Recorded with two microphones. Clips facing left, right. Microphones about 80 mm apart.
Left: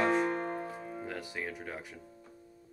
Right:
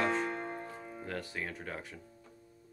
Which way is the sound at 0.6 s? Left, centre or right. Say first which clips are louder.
Left 4 dB; centre.